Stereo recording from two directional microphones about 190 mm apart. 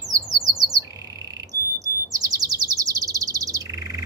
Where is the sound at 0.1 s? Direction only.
20° right (ahead or behind).